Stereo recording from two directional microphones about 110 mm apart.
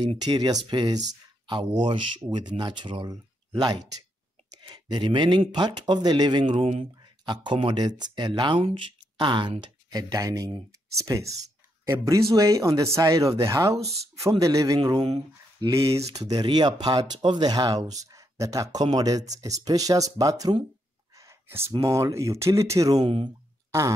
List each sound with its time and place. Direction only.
0.2 s speech: 35° right (ahead or behind); by 6.9 s 60° right (ahead or behind)
7.2 s speech: 50° right (ahead or behind)
9.6 s speech: 35° right (ahead or behind)
16.3 s speech: 40° right (ahead or behind)
21.2 s a sound: 25° right (ahead or behind)
21.8 s speech: 25° right (ahead or behind)
23.0 s speech: 50° right (ahead or behind)